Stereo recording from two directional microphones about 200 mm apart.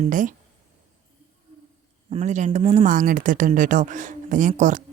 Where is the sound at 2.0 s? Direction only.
30° right (ahead or behind).